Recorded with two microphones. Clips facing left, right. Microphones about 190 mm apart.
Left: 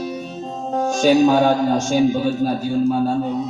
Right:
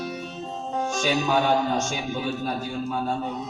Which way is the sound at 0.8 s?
45° left (ahead or behind).